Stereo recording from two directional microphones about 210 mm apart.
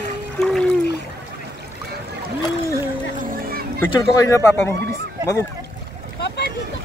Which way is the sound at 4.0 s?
15° left (ahead or behind).